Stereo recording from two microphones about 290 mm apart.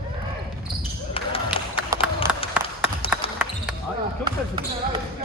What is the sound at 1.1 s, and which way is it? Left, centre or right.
Basketball bounce, centre.